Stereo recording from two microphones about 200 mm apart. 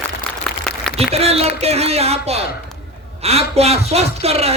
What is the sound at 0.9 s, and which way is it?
A man's voice, 30° right (ahead or behind).